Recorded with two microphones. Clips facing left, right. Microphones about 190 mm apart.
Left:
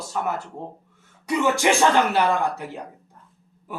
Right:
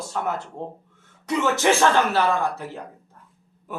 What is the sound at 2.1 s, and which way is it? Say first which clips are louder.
Speech: left 1 dB; 15° left (ahead or behind).